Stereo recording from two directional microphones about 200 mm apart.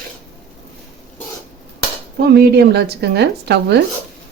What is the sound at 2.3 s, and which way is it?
Speech, 55° right (ahead or behind).